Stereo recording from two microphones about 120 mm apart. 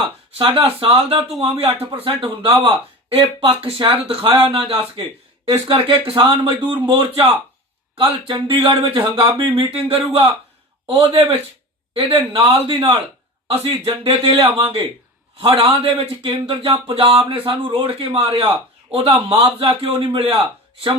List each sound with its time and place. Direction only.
0.0 s speech: 45° right (ahead or behind)
10.8 s speech: 50° right (ahead or behind)